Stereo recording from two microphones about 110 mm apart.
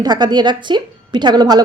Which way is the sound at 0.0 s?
40° right (ahead or behind).